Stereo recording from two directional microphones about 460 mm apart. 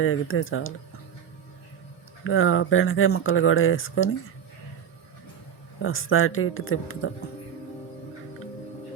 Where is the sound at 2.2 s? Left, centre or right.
Left.